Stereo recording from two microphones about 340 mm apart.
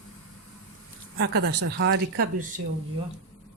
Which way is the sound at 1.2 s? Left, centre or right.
Right.